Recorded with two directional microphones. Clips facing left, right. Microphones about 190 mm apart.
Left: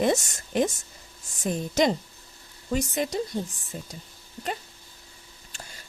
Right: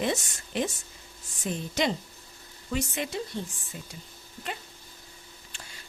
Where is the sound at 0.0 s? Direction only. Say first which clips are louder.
Left 5 dB; 45° left (ahead or behind).